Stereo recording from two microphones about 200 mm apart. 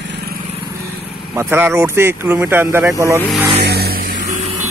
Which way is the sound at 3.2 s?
Centre (ahead or behind).